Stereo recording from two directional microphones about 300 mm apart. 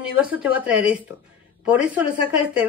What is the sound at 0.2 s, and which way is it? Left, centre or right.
Speech, centre.